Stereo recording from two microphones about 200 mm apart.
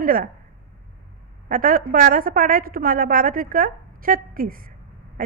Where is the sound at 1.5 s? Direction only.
45° right (ahead or behind).